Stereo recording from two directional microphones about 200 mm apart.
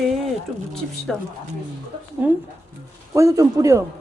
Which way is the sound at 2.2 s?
10° right (ahead or behind).